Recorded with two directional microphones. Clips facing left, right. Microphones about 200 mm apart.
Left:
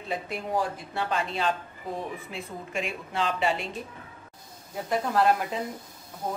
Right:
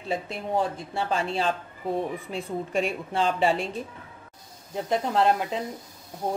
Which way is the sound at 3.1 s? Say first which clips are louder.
Right 2 dB; 30° right (ahead or behind).